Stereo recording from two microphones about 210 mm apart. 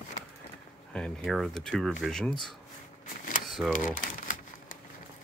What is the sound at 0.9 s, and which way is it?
Speech, centre (ahead or behind).